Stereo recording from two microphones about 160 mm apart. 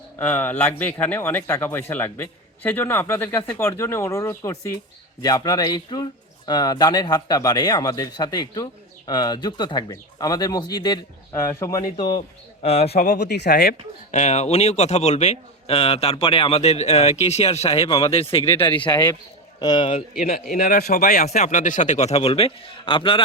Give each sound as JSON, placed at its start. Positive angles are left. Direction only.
{"t": 0.2, "sound": "speech", "side_deg": 10}
{"t": 12.6, "sound": "a man's voice", "side_deg": 40}
{"t": 13.0, "sound": "speech", "side_deg": 90}
{"t": 14.1, "sound": "a man's voice", "side_deg": 45}
{"t": 20.5, "sound": "speech", "side_deg": 70}